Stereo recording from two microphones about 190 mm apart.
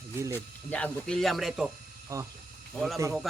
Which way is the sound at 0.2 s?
15° right (ahead or behind).